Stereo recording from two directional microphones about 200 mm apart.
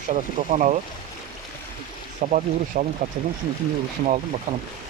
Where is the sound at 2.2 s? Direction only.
40° right (ahead or behind).